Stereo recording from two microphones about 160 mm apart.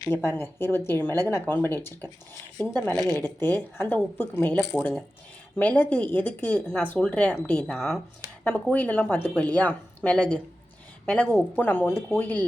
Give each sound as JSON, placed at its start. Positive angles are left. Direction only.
{"t": 0.0, "sound": "speech", "side_deg": 15}